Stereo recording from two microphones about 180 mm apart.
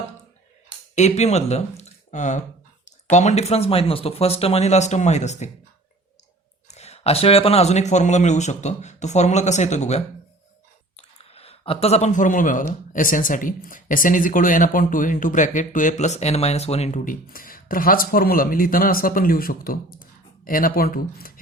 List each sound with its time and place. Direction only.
0.9 s a man's voice: 40° left (ahead or behind)
6.7 s a man's voice: 35° left (ahead or behind); by 21.3 s 55° left (ahead or behind)